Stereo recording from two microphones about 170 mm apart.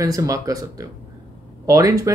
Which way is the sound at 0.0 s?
20° right (ahead or behind).